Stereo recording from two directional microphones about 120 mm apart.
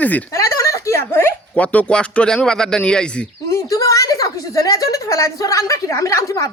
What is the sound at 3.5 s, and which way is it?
A woman's voice, 25° left (ahead or behind).